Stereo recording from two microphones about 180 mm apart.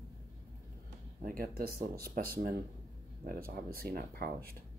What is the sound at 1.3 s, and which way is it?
Speech, 55° right (ahead or behind).